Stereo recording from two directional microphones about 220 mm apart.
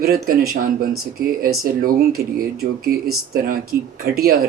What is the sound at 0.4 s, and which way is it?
Speech, 40° right (ahead or behind).